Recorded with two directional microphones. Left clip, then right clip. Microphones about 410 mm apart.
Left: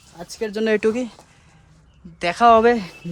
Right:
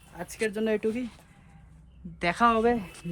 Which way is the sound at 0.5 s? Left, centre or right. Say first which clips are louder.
Left 11 dB; left.